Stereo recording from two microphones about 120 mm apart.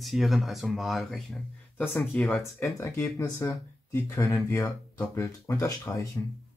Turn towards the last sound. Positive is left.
turn(degrees=25)  # may be behind; listen again after turning